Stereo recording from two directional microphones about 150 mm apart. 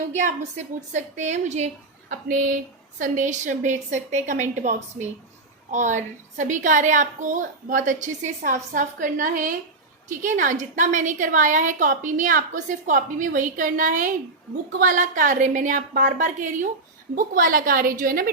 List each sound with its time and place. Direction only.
0.1 s a woman's voice: 50° right (ahead or behind); by 18.3 s 70° right (ahead or behind)